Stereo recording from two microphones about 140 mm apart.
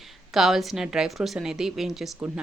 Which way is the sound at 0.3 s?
Centre (ahead or behind).